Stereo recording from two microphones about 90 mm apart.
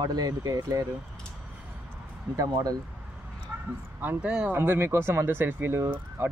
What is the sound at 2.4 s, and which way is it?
Speech, 45° right (ahead or behind).